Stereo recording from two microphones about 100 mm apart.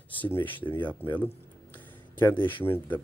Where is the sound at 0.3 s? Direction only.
20° left (ahead or behind).